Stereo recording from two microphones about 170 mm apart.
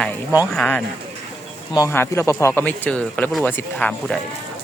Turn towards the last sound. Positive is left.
turn(degrees=5)  # may be behind; listen again after turning